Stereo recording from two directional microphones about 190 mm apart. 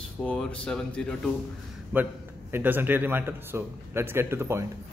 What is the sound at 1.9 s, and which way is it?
A man's voice, 10° right (ahead or behind).